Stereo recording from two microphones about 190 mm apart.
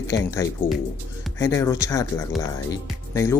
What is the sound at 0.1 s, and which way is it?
Speech, 15° left (ahead or behind).